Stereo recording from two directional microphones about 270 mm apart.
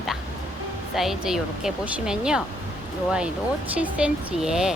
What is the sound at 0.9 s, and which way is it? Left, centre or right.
A woman's voice, centre.